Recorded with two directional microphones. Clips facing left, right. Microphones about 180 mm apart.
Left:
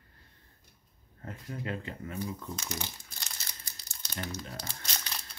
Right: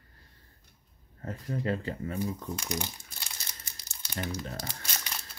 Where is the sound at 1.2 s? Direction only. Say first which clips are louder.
Right 6 dB; 35° right (ahead or behind).